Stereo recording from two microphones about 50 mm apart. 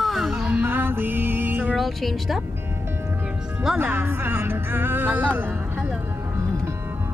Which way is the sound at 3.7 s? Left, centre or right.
Right.